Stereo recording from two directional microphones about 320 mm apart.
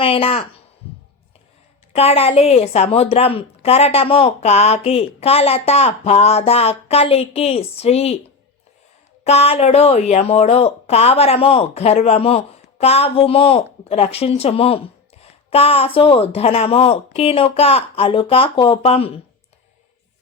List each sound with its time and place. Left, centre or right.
0.0 s speech: centre
1.9 s a woman's voice: centre
9.2 s a woman's voice: centre